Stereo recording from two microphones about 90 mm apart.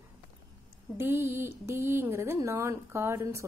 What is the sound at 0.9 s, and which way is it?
A woman's voice, 25° right (ahead or behind).